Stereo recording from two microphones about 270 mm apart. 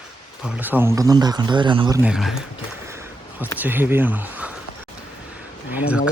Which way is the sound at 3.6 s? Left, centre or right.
Centre.